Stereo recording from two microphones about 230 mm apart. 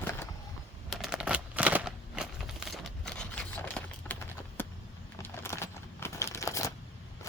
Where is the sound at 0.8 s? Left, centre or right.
Centre.